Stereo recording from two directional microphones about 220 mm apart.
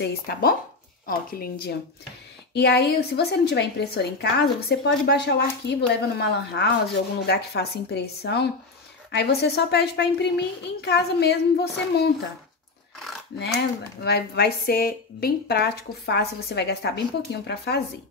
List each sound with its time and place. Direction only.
0.0 s a woman's voice: 45° left (ahead or behind)
14.0 s a woman's voice: 45° left (ahead or behind)